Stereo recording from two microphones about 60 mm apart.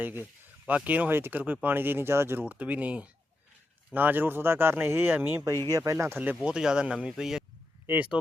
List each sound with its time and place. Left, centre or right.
0.0 s speech: right
2.4 s speech: right
5.1 s speech: right
5.7 s speech: right
6.4 s speech: centre
7.9 s speech: right